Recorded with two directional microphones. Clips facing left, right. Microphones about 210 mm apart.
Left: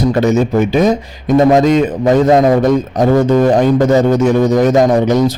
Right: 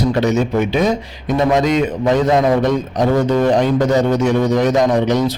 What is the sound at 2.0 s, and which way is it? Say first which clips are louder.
A man's voice: left 5 dB; 45° left (ahead or behind).